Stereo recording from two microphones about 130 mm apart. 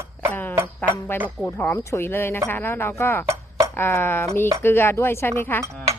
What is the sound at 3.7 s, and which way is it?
Speech, 15° left (ahead or behind).